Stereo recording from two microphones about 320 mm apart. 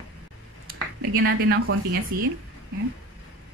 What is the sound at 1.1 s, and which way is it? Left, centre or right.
Speech, right.